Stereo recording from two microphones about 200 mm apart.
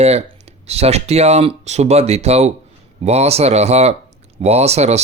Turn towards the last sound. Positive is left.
turn(degrees=-30)  # may be behind; listen again after turning